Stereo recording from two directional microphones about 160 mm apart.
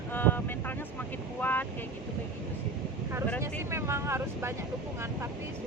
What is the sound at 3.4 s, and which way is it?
Speech, 15° right (ahead or behind).